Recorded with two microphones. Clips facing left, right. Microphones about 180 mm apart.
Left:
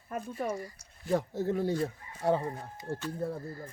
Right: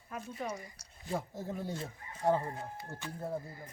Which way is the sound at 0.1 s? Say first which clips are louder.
Left 6 dB; 45° left (ahead or behind).